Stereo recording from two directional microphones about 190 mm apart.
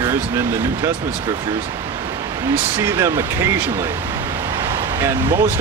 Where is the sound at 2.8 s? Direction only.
15° right (ahead or behind).